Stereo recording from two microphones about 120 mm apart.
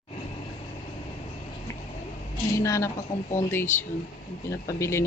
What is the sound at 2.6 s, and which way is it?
Speech, 25° left (ahead or behind).